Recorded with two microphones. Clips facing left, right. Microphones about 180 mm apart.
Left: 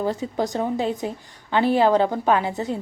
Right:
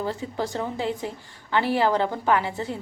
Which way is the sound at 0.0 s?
15° left (ahead or behind).